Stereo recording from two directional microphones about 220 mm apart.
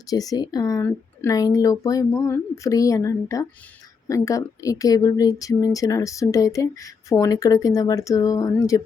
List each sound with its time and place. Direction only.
0.1 s a woman's voice: 15° left (ahead or behind)